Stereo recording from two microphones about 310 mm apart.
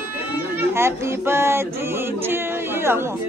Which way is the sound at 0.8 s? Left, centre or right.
Centre.